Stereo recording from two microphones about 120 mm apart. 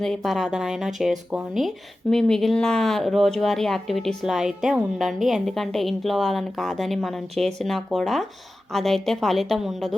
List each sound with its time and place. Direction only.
0.0 s speech: 5° left (ahead or behind)